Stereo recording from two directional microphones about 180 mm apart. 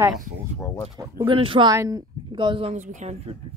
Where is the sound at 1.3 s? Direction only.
30° right (ahead or behind).